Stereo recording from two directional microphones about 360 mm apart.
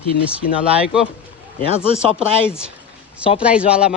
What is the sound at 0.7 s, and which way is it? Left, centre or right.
Speech, centre.